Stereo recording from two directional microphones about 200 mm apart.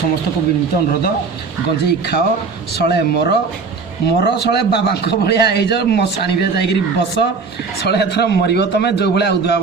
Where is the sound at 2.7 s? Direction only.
55° left (ahead or behind).